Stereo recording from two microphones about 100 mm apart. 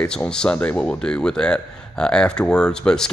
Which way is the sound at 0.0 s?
10° left (ahead or behind).